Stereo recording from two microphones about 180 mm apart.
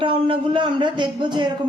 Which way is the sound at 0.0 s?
25° right (ahead or behind).